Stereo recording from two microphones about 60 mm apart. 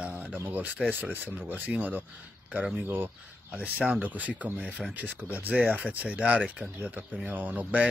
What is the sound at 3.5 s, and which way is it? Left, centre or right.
Speech, right.